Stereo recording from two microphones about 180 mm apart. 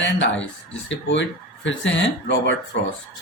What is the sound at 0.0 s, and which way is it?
Speech, 90° left.